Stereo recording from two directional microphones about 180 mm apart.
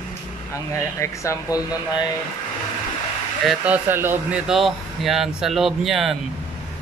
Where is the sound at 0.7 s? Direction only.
15° left (ahead or behind).